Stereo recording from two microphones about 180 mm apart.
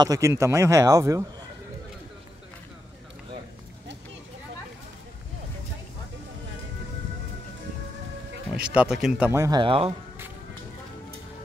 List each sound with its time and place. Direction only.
0.0 s a man's voice: 20° right (ahead or behind)
8.5 s speech: 5° right (ahead or behind)
9.3 s speech: 20° right (ahead or behind)